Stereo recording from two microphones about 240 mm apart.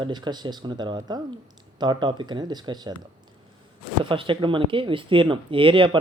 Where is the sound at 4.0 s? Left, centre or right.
Right.